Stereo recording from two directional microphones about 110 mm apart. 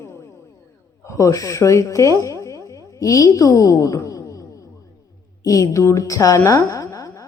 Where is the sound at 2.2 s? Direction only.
30° left (ahead or behind).